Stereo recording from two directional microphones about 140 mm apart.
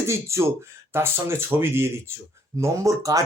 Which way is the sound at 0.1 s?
20° right (ahead or behind).